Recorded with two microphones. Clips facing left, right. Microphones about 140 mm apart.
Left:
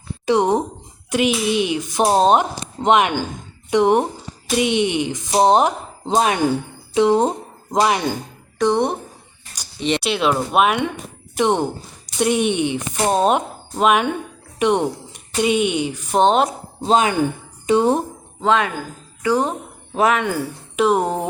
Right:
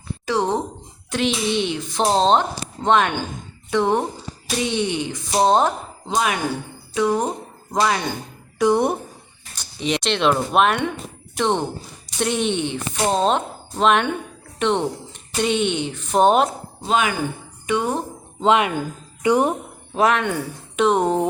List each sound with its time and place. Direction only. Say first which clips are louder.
0.3 s a sound: left 5 dB; 20° left (ahead or behind)
1.1 s speech: left 3 dB; 10° left (ahead or behind)
6.1 s speech: left 5 dB; 35° left (ahead or behind)
8.5 s speech: even; 5° right (ahead or behind)
16.2 s speech: even; 5° right (ahead or behind)
16.8 s speech: left 4 dB; 30° left (ahead or behind)
18.3 s speech: right 1 dB; 20° right (ahead or behind)
19.9 s speech: left 1 dB; centre (ahead or behind)